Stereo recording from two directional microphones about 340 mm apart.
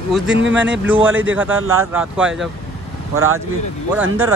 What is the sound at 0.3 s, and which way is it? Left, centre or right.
Speech, right.